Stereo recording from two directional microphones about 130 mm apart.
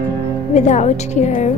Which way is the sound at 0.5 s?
65° left (ahead or behind).